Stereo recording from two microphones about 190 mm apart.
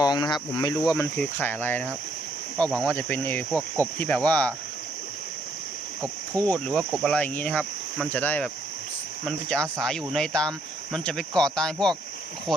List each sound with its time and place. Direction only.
0.0 s cricket: 20° left (ahead or behind)
6.3 s cricket: 10° left (ahead or behind)
9.2 s speech: 5° left (ahead or behind)